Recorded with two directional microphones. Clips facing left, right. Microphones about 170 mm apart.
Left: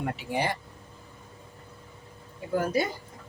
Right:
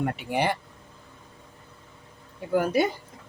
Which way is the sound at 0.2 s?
60° right (ahead or behind).